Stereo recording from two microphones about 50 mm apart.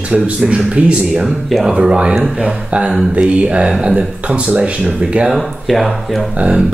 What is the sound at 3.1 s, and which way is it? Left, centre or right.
Speech, right.